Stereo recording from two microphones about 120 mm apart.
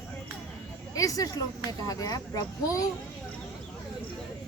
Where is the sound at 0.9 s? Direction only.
30° left (ahead or behind).